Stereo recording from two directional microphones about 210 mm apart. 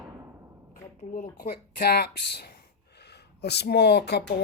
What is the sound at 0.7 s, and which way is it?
Speech, 40° left (ahead or behind).